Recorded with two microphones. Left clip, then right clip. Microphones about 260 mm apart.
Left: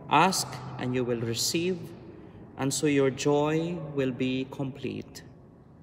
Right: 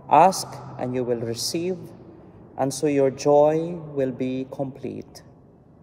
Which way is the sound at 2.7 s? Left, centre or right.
Centre.